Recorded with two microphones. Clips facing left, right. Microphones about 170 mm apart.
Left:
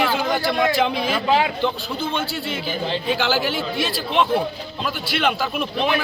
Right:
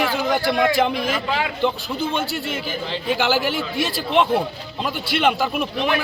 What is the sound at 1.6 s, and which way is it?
Speech, 10° right (ahead or behind).